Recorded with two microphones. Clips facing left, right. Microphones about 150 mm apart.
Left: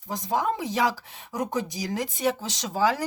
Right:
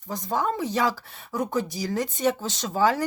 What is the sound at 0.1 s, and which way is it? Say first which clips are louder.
Speech: even; 15° left (ahead or behind).